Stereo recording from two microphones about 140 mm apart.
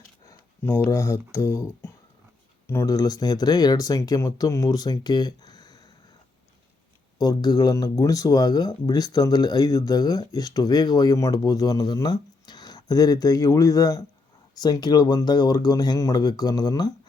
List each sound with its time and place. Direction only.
0.3 s a sound: 20° left (ahead or behind)
1.3 s speech: 20° left (ahead or behind)
7.2 s speech: 30° left (ahead or behind)